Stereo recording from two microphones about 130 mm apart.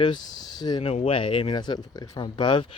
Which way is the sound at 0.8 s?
50° left (ahead or behind).